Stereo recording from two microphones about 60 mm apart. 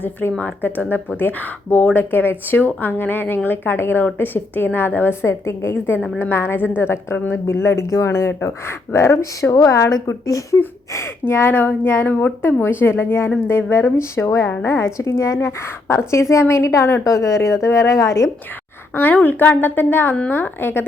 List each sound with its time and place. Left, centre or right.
0.0 s speech: left
5.2 s a woman's voice: left
10.9 s a woman's voice: left
18.9 s speech: left